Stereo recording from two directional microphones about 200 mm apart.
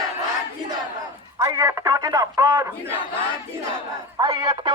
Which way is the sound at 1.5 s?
20° right (ahead or behind).